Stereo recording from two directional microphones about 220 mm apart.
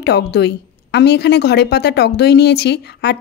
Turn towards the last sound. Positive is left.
turn(degrees=50)  # may be behind; listen again after turning